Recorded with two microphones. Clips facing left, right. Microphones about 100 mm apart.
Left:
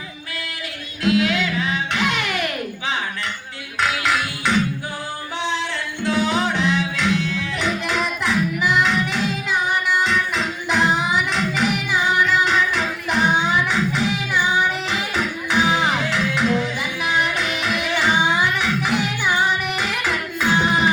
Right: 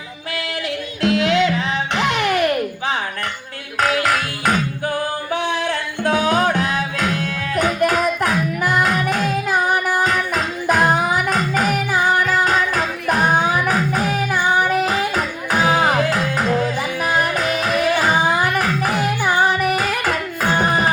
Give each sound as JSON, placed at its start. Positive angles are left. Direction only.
{"t": 1.0, "sound": "music", "side_deg": -70}
{"t": 2.0, "sound": "music", "side_deg": -55}
{"t": 3.8, "sound": "music", "side_deg": -45}